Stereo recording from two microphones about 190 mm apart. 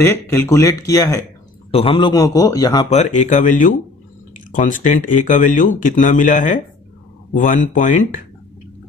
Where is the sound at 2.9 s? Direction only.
40° left (ahead or behind).